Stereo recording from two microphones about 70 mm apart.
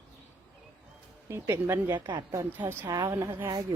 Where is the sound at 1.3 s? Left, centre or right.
Right.